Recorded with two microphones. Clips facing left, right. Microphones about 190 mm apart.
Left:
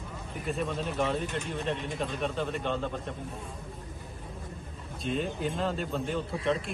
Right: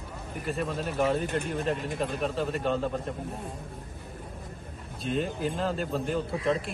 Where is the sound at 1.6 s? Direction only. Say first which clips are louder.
Right 3 dB; centre (ahead or behind).